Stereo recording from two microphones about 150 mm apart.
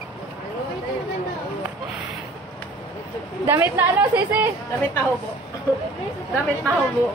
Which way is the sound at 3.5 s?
15° right (ahead or behind).